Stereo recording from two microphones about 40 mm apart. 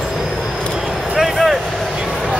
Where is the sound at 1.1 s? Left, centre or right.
Centre.